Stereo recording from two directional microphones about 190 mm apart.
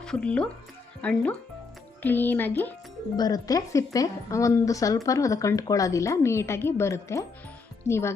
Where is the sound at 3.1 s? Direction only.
20° left (ahead or behind).